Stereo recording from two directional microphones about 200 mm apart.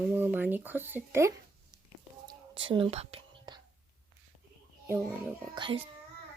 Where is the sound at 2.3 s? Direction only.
25° right (ahead or behind).